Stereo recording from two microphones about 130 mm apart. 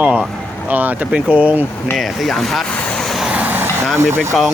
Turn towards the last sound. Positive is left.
turn(degrees=-20)  # may be behind; listen again after turning